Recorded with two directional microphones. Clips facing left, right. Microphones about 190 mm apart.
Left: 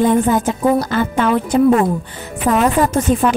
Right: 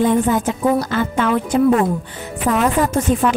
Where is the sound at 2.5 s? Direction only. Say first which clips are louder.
Left 2 dB; 35° left (ahead or behind).